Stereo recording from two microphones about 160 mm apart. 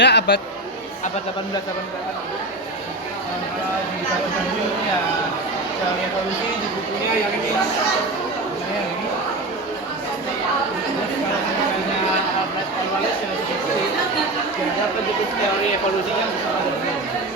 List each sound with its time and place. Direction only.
0.0 s speech: 90° left